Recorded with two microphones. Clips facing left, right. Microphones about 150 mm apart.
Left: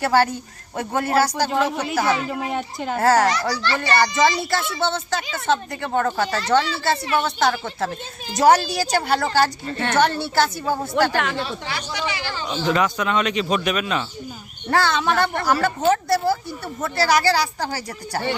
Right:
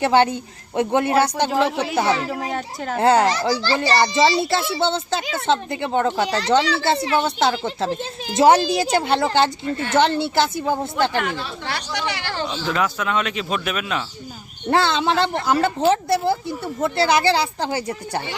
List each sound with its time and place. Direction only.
0.0 s a child's voice: 20° right (ahead or behind)
1.5 s speech: centre (ahead or behind)
2.0 s a child's voice: 30° right (ahead or behind)
2.2 s speech: centre (ahead or behind)
3.0 s a child's voice: 25° right (ahead or behind)
11.3 s speech: 65° right (ahead or behind)
12.5 s speech: centre (ahead or behind)
14.7 s a child's voice: 25° right (ahead or behind)